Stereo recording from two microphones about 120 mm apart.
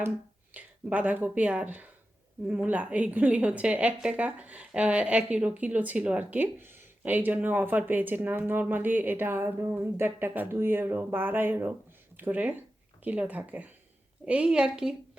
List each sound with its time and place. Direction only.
0.5 s a woman's voice: 15° right (ahead or behind)